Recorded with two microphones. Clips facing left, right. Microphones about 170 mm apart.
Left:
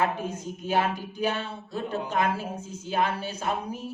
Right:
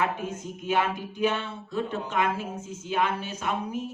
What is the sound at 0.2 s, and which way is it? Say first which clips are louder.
Speech: left 1 dB; 35° left (ahead or behind).